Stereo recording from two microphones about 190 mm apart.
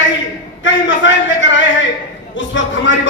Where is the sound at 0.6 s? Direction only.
80° left.